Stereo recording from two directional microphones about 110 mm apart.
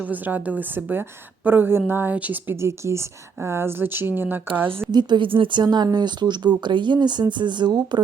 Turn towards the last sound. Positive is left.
turn(degrees=-40)  # may be behind; listen again after turning